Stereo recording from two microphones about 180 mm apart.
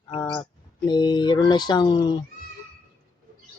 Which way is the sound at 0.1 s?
25° left (ahead or behind).